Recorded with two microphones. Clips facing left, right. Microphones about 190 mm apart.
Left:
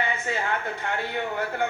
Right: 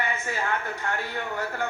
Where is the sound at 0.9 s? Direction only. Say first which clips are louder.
Left 2 dB; 20° left (ahead or behind).